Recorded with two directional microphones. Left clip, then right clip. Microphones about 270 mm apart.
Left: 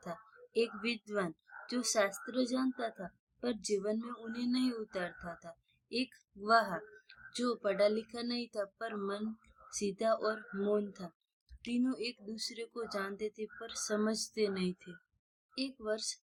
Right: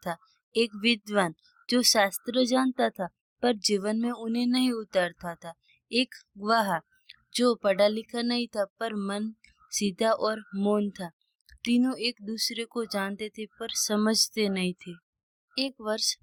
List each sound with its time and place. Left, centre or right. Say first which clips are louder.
0.0 s speech: right 10 dB; right